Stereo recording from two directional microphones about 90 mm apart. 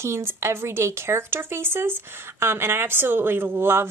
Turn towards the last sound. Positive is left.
turn(degrees=-25)  # may be behind; listen again after turning